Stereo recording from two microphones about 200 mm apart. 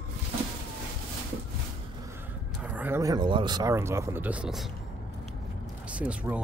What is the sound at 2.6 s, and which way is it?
Speech, 10° right (ahead or behind).